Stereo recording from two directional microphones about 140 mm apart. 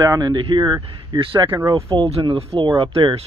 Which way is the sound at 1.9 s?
40° right (ahead or behind).